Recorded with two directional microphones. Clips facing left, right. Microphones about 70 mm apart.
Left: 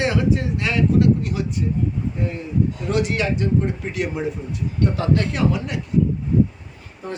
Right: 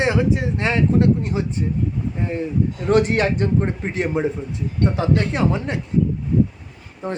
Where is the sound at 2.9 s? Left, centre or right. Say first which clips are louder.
Right 7 dB; right.